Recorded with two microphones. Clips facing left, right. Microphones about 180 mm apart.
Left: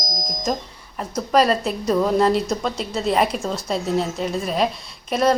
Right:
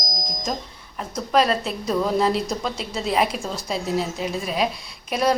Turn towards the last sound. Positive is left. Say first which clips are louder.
# left 3 dB
turn(degrees=-5)  # may be behind; listen again after turning